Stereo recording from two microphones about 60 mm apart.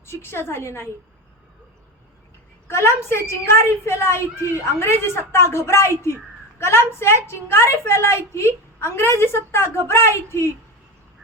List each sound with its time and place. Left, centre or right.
0.0 s a woman's voice: left
2.6 s a woman's voice: left